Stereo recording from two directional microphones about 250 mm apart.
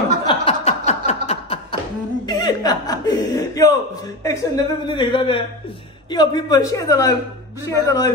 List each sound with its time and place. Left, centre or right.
0.3 s chuckle: left
2.2 s a woman's voice: centre